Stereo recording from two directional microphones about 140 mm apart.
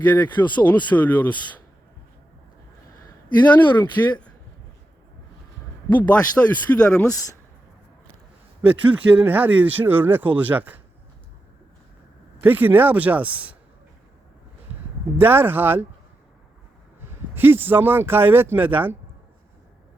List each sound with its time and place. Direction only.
0.0 s speech: 10° left (ahead or behind)
3.4 s speech: 10° left (ahead or behind)
5.9 s speech: 10° left (ahead or behind)
7.1 s speech: 25° left (ahead or behind)
8.6 s speech: 10° right (ahead or behind)
12.4 s speech: 15° right (ahead or behind)
15.2 s speech: 15° right (ahead or behind)
17.1 s speech: 15° right (ahead or behind)